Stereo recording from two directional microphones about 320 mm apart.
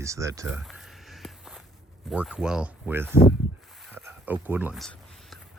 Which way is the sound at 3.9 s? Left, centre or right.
Centre.